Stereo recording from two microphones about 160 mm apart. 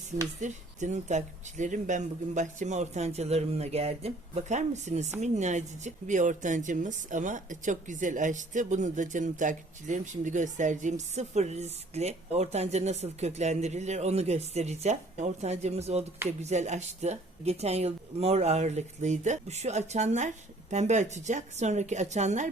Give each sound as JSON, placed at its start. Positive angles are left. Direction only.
{"t": 0.3, "sound": "speech", "side_deg": -50}